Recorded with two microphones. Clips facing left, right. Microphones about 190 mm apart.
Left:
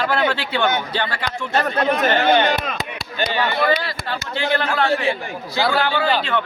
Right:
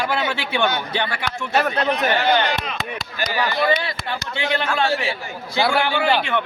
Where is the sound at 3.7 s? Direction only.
15° right (ahead or behind).